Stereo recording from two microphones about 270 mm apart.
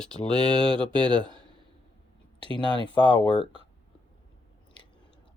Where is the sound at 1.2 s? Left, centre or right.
Centre.